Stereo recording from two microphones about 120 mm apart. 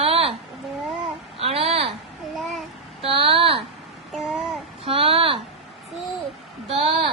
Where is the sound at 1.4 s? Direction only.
55° right (ahead or behind).